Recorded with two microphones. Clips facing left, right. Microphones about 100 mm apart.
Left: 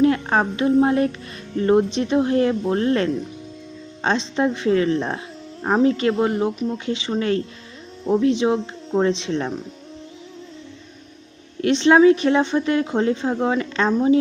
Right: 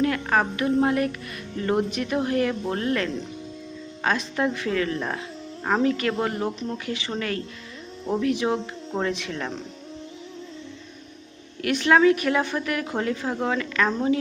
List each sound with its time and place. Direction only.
0.0 s a woman's voice: 25° left (ahead or behind)
11.6 s a woman's voice: 25° left (ahead or behind)